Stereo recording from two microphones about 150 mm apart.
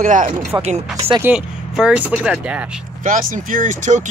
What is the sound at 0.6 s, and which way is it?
Speech, 40° right (ahead or behind).